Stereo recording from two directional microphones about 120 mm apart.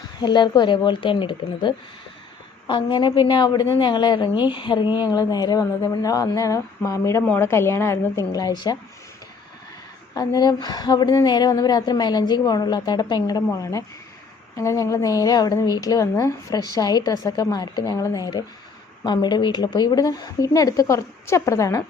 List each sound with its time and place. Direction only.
0.2 s a woman's voice: 40° left (ahead or behind)
10.2 s a woman's voice: 35° left (ahead or behind)